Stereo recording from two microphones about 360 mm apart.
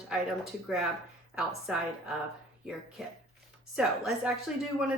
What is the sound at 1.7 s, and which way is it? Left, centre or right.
Speech, centre.